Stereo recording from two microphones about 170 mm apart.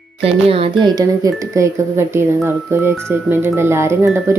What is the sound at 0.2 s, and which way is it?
Speech, 35° right (ahead or behind).